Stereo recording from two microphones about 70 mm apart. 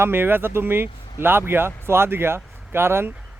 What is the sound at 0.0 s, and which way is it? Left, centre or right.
Speech, right.